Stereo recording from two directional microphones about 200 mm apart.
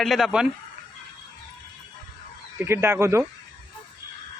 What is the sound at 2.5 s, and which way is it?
Speech, 10° right (ahead or behind).